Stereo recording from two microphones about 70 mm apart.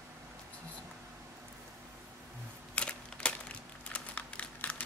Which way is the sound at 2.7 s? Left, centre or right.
Centre.